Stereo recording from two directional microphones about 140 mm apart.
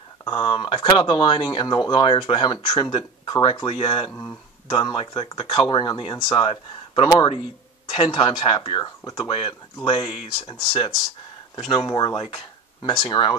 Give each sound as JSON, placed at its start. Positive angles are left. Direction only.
{"t": 0.3, "sound": "speech", "side_deg": 35}
{"t": 4.1, "sound": "speech", "side_deg": 15}
{"t": 4.6, "sound": "speech", "side_deg": 35}